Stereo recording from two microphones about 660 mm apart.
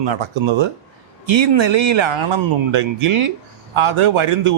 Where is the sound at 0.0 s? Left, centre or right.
Right.